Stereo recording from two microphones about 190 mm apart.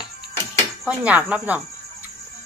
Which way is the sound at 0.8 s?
5° right (ahead or behind).